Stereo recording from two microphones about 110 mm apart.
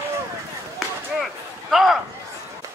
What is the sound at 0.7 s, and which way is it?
Chop, centre (ahead or behind).